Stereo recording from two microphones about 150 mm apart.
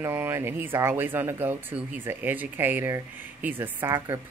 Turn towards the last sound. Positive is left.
turn(degrees=-20)  # may be behind; listen again after turning